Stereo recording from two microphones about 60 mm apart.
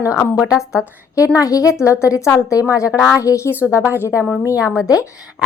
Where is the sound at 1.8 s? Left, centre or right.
Left.